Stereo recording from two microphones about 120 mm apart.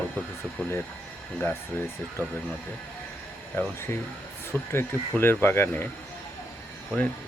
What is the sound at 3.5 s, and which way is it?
Speech, 20° left (ahead or behind).